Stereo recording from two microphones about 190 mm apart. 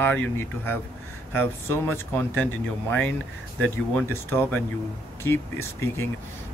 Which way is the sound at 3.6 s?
10° left (ahead or behind).